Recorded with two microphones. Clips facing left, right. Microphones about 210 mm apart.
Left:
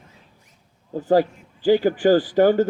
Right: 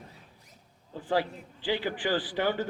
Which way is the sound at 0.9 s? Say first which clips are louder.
Left 11 dB; 45° left (ahead or behind).